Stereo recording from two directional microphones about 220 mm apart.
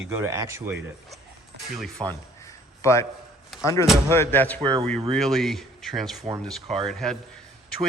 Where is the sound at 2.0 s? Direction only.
20° right (ahead or behind).